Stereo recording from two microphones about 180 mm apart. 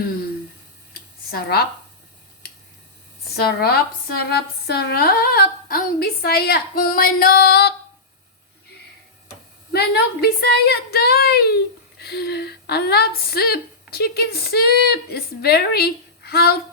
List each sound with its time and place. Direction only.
1.3 s a woman's voice: 60° left (ahead or behind)
2.4 s a sound: 60° left (ahead or behind)
3.3 s a woman's voice: 60° left (ahead or behind)
9.7 s a woman's voice: 60° left (ahead or behind)